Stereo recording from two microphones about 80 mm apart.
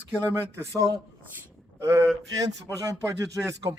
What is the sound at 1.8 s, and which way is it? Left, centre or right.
Speech, right.